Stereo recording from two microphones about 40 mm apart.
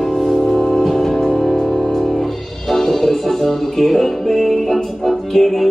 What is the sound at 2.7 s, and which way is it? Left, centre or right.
Music, centre.